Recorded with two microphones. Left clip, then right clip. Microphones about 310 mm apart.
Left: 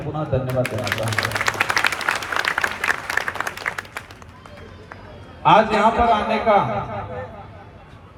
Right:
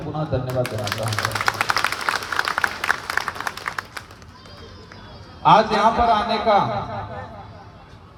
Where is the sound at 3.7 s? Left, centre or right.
Centre.